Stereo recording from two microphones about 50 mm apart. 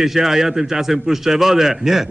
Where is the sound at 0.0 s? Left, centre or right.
Centre.